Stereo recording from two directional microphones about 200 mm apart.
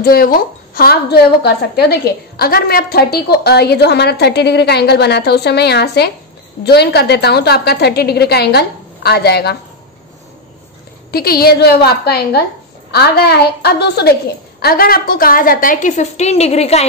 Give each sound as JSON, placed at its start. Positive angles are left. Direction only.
{"t": 0.0, "sound": "a woman's voice", "side_deg": 50}
{"t": 11.1, "sound": "a woman's voice", "side_deg": 50}